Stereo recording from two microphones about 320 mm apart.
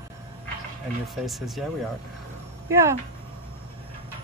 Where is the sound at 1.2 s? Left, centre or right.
Centre.